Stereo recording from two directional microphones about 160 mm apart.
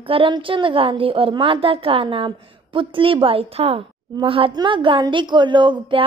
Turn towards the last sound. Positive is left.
turn(degrees=-30)  # may be behind; listen again after turning